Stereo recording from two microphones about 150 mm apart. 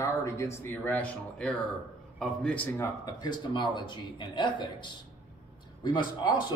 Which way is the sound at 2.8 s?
25° left (ahead or behind).